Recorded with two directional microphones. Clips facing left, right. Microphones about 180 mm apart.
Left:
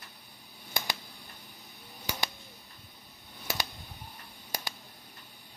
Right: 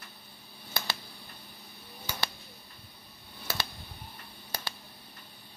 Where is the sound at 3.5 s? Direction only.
15° left (ahead or behind).